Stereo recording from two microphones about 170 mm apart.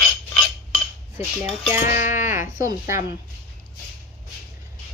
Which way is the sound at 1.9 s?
50° left (ahead or behind).